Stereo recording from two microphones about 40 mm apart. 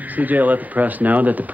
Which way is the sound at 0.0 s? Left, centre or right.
Right.